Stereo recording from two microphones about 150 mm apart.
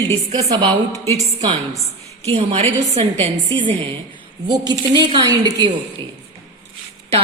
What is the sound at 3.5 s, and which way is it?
A woman's voice, 35° right (ahead or behind).